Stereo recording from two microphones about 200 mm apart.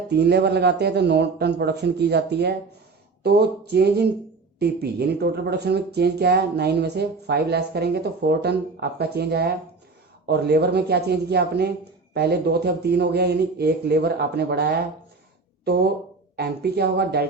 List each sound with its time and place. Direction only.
0.1 s a man's voice: 55° right (ahead or behind)